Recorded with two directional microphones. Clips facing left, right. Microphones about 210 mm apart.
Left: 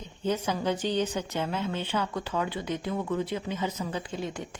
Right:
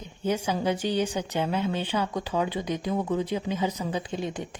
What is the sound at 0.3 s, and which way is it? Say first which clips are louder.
A woman's voice: right 2 dB; 10° right (ahead or behind).